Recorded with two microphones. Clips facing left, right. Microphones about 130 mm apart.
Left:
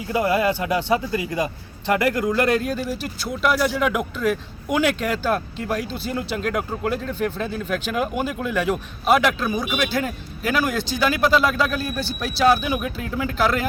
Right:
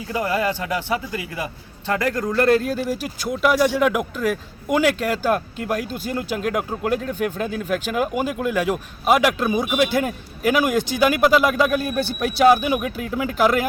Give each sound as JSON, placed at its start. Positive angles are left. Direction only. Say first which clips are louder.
{"t": 0.1, "sound": "speech", "louder": "left 2 dB", "side_deg": 15}
{"t": 1.9, "sound": "speech", "louder": "left 2 dB", "side_deg": 15}
{"t": 9.4, "sound": "speech", "louder": "right 4 dB", "side_deg": -20}
{"t": 11.9, "sound": "speech", "louder": "right 4 dB", "side_deg": -55}
{"t": 12.4, "sound": "speech", "louder": "right 3 dB", "side_deg": -15}